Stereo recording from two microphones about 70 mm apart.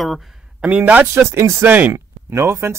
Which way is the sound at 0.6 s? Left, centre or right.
Right.